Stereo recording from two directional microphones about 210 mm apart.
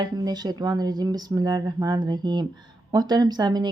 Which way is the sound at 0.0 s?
20° right (ahead or behind).